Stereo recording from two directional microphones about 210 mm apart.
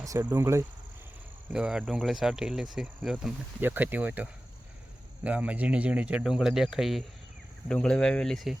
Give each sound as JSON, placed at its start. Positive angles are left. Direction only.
{"t": 0.0, "sound": "speech", "side_deg": -15}